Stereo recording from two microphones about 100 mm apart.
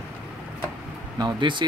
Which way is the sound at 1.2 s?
50° right (ahead or behind).